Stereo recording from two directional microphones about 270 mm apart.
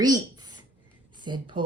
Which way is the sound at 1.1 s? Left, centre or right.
Centre.